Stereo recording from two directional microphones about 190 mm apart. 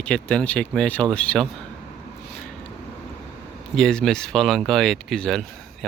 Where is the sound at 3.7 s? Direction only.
5° left (ahead or behind).